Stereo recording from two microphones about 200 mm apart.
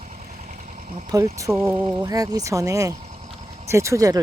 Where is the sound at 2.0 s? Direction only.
20° right (ahead or behind).